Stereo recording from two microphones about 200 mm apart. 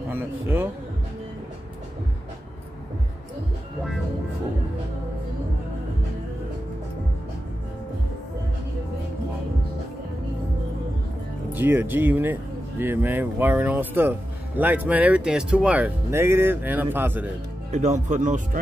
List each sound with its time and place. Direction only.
0.1 s speech: 10° right (ahead or behind)
11.5 s speech: 10° right (ahead or behind)
17.6 s speech: 35° right (ahead or behind)